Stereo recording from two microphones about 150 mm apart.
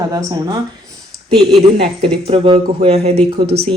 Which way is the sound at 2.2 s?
35° right (ahead or behind).